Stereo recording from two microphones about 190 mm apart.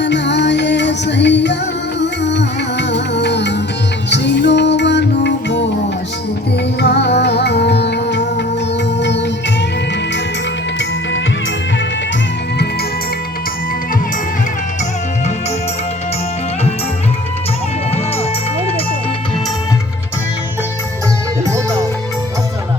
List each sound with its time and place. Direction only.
0.0 s music: 65° left (ahead or behind)
6.7 s music: 60° left (ahead or behind)